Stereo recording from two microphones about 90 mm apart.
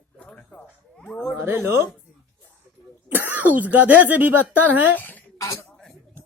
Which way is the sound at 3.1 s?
20° right (ahead or behind).